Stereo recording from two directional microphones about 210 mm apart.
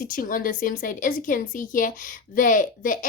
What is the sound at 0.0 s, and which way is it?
A woman's voice, 40° left (ahead or behind).